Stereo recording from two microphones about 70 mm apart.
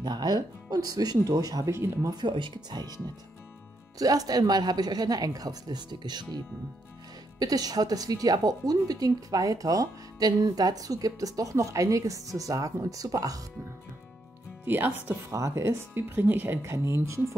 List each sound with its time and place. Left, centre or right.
0.0 s a woman's voice: right
2.0 s speech: right
4.0 s a woman's voice: right
7.3 s a woman's voice: right
14.6 s speech: right
15.3 s speech: right
15.9 s speech: right
16.6 s speech: right